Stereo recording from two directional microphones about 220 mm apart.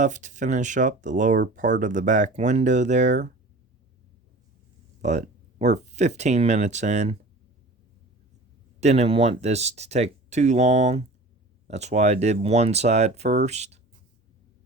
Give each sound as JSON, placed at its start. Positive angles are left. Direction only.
{"t": 0.0, "sound": "speech", "side_deg": -35}
{"t": 5.0, "sound": "speech", "side_deg": -30}
{"t": 8.8, "sound": "speech", "side_deg": -30}